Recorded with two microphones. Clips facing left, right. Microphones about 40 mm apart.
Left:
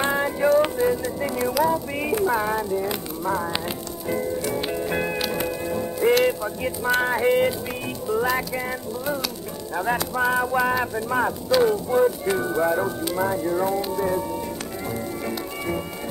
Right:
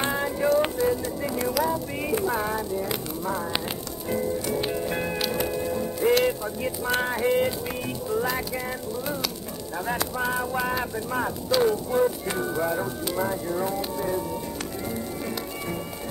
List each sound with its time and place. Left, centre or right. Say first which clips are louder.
0.0 s music: left 4 dB; centre
0.8 s music: left 2 dB; left
1.5 s music: left 5 dB; centre
4.5 s music: left 1 dB; centre